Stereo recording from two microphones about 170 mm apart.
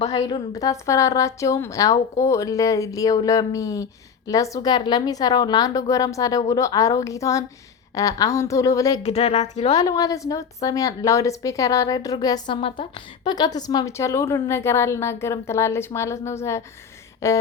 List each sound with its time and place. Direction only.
0.0 s speech: 40° left (ahead or behind)
0.3 s a woman's voice: 25° left (ahead or behind)
9.0 s speech: 35° left (ahead or behind)
9.7 s a woman's voice: 20° left (ahead or behind)
17.2 s a sound: 15° left (ahead or behind)